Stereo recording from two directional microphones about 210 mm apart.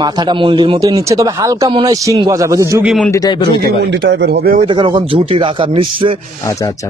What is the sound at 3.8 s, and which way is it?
Speech, 55° right (ahead or behind).